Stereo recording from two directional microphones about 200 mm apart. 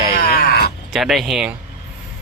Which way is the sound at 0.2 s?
50° left (ahead or behind).